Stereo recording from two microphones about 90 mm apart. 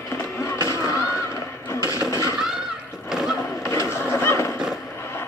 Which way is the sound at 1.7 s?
35° left (ahead or behind).